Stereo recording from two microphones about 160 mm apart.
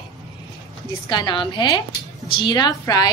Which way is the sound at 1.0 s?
30° left (ahead or behind).